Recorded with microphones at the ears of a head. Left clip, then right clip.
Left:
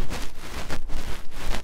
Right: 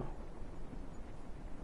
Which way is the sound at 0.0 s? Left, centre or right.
Left.